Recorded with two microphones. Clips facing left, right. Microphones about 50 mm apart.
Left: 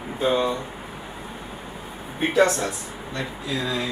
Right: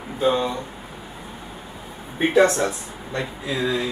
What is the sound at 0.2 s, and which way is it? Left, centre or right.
Speech, centre.